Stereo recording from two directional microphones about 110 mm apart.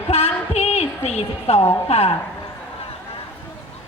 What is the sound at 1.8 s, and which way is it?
Speech, 65° left (ahead or behind).